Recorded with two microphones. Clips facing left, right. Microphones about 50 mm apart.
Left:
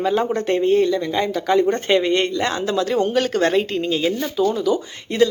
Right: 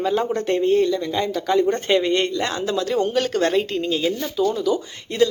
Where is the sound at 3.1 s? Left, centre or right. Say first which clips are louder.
Left 2 dB; centre.